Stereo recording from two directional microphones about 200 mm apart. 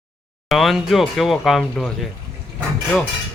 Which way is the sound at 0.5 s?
Centre (ahead or behind).